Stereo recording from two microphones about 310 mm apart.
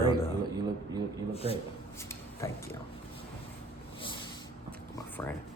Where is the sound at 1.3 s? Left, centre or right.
Centre.